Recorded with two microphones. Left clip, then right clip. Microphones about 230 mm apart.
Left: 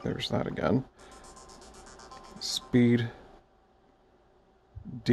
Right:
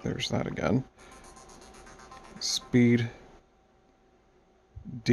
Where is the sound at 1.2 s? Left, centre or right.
Centre.